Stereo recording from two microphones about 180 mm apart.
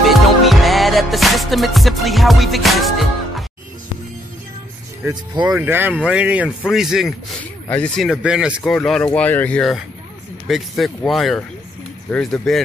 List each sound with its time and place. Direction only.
0.0 s music: centre (ahead or behind)
5.0 s speech: 20° right (ahead or behind)
5.6 s speech: 10° right (ahead or behind)